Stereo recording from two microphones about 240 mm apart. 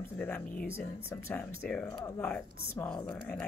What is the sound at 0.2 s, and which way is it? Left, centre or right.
Speech, centre.